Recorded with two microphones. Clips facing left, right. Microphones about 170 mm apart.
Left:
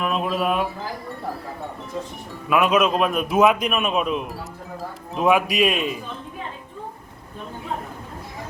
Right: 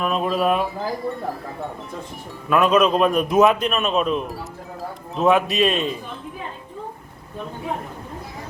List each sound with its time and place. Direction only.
0.0 s a man's voice: centre (ahead or behind)
2.5 s a man's voice: 10° left (ahead or behind)